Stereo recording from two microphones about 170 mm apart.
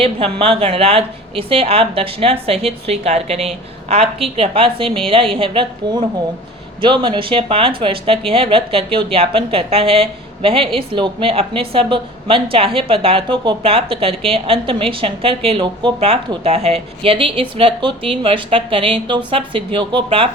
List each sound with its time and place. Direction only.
0.0 s a woman's voice: 35° right (ahead or behind)